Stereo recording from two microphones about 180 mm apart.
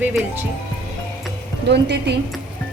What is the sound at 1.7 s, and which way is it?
Speech, 70° right (ahead or behind).